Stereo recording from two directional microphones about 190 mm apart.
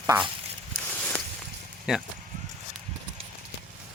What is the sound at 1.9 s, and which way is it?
Speech, 5° right (ahead or behind).